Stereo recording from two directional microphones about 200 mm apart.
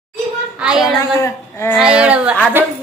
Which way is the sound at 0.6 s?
5° right (ahead or behind).